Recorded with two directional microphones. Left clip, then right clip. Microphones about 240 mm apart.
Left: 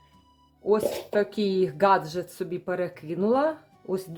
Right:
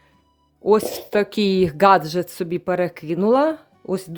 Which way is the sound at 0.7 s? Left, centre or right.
Right.